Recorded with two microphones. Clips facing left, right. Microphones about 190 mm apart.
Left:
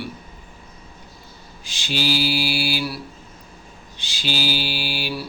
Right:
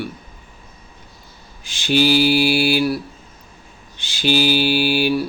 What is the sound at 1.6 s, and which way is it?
Mantra, 55° right (ahead or behind).